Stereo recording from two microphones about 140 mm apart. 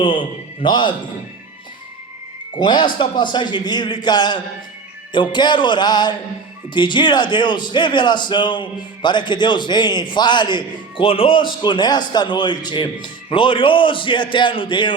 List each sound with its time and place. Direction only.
0.0 s a man's voice: 35° left (ahead or behind)
2.6 s a man's voice: 35° left (ahead or behind)